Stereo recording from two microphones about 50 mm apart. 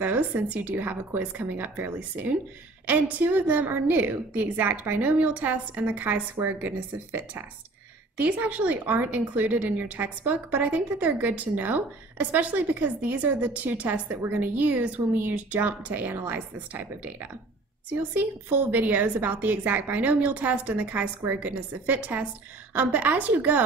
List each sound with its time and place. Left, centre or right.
0.0 s a woman's voice: right